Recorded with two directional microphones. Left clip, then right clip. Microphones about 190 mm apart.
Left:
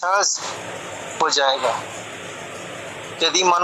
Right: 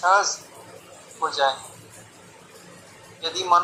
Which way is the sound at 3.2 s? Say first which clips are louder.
Left 3 dB; 50° left (ahead or behind).